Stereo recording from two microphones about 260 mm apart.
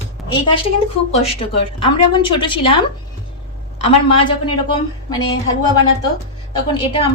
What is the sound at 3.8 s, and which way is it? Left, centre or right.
Speech, left.